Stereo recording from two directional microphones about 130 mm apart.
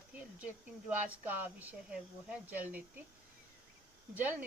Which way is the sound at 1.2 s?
15° right (ahead or behind).